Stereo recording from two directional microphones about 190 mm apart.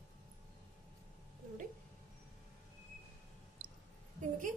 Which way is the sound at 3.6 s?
90° right.